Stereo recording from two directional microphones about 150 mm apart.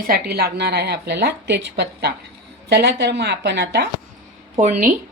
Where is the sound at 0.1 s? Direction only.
90° right.